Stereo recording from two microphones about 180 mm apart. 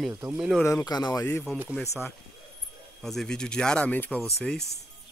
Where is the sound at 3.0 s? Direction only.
Centre (ahead or behind).